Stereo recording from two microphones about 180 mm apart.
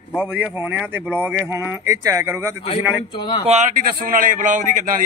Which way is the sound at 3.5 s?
45° right (ahead or behind).